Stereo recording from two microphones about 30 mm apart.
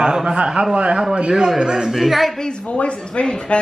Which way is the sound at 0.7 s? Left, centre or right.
Right.